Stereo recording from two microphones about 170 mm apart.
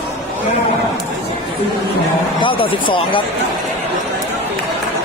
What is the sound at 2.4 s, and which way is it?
Speech, 30° left (ahead or behind).